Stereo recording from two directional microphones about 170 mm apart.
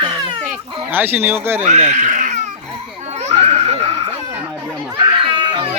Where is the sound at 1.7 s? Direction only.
45° right (ahead or behind).